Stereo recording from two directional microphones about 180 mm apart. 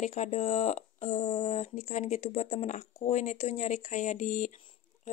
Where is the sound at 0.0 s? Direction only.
40° left (ahead or behind).